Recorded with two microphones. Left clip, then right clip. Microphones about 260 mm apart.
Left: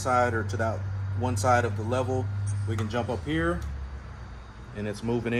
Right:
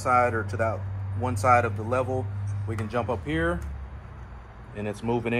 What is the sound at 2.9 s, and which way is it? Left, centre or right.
Speech, right.